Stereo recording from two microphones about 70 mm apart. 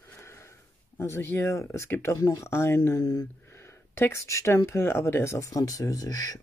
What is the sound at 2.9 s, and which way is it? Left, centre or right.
Speech, left.